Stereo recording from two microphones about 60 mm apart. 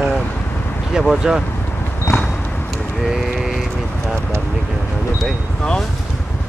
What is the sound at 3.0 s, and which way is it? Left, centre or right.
Vehicle, centre.